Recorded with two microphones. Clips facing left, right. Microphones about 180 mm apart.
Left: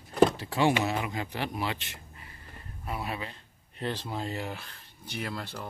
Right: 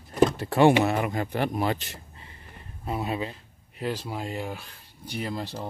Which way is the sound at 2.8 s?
25° right (ahead or behind).